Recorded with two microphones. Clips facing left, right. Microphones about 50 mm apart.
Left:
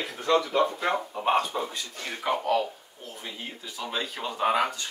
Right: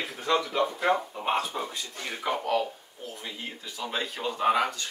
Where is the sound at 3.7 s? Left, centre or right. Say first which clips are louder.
Even; centre.